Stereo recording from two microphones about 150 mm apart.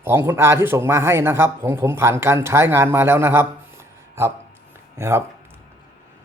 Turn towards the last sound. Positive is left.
turn(degrees=-15)  # may be behind; listen again after turning